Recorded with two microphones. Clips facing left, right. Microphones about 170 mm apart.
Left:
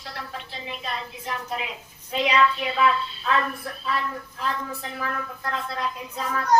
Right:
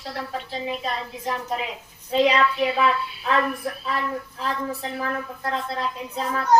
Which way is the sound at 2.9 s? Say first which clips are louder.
Even; 10° right (ahead or behind).